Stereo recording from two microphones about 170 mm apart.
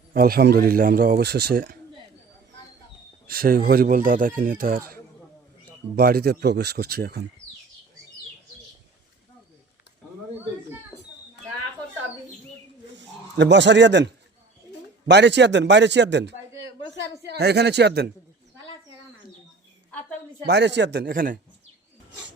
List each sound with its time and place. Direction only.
0.1 s a man's voice: 60° right (ahead or behind)
3.2 s a man's voice: 60° right (ahead or behind)
6.0 s a man's voice: 65° right (ahead or behind)
10.9 s a sound: 15° left (ahead or behind)
13.0 s a man's voice: 90° right
17.2 s speech: 75° right (ahead or behind)
20.5 s a man's voice: 85° right
21.1 s a man's voice: 55° right (ahead or behind)